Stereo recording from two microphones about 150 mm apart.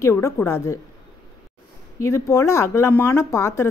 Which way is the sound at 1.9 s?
20° left (ahead or behind).